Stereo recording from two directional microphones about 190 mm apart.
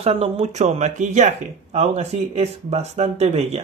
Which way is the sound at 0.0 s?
30° right (ahead or behind).